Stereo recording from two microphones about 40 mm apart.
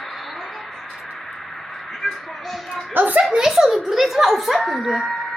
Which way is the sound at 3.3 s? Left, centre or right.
Centre.